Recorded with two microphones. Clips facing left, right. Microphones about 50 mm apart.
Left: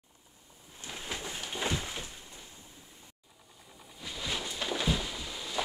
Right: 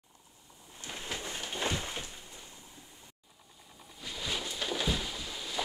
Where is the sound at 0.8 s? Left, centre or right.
Centre.